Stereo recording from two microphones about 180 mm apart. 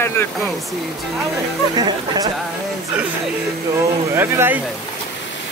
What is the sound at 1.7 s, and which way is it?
Speech, 20° right (ahead or behind).